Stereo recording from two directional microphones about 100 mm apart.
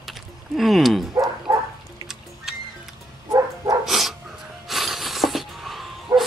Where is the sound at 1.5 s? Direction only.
40° right (ahead or behind).